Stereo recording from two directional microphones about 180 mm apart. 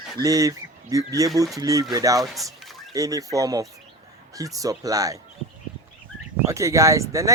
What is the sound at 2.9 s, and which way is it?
Speech, 20° right (ahead or behind).